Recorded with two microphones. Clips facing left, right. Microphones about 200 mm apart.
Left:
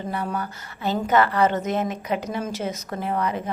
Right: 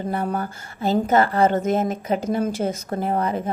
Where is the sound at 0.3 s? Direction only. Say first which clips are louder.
Right 3 dB; 45° right (ahead or behind).